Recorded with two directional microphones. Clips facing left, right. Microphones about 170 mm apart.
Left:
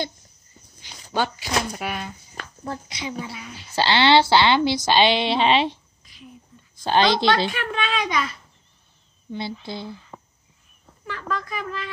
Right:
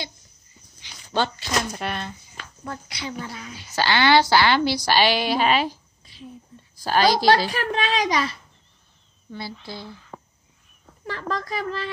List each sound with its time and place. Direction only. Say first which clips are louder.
1.1 s speech: even; 10° left (ahead or behind)
2.6 s speech: left 2 dB; 30° left (ahead or behind)
3.0 s speech: left 1 dB; 15° left (ahead or behind)
3.7 s a woman's voice: left 1 dB; 25° left (ahead or behind)
6.1 s a sound: right 5 dB; 30° right (ahead or behind)
6.7 s a woman's voice: even; 25° left (ahead or behind)
7.4 s a child's voice: right 2 dB; 35° right (ahead or behind)
9.3 s speech: left 4 dB; 15° left (ahead or behind)
9.8 s a sound: left 3 dB; 5° left (ahead or behind)
11.1 s speech: right 1 dB; 35° right (ahead or behind)